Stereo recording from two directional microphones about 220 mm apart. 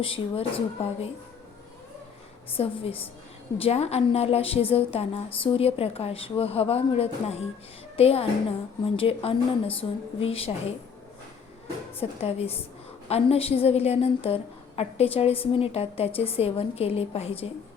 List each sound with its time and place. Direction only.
0.0 s a woman's voice: 25° left (ahead or behind)
2.6 s a woman's voice: 25° left (ahead or behind)
11.9 s a woman's voice: 25° left (ahead or behind)